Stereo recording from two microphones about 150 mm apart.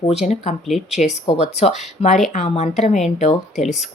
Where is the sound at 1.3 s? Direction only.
45° left (ahead or behind).